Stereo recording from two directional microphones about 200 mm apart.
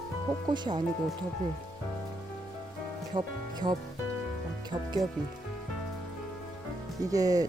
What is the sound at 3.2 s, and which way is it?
Speech, 20° right (ahead or behind).